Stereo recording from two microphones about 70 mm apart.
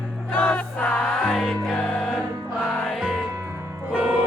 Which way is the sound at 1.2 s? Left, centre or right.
Centre.